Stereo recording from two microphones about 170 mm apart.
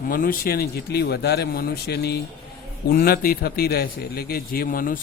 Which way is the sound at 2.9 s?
60° left (ahead or behind).